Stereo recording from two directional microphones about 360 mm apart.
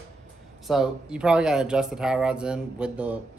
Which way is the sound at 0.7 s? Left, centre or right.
Centre.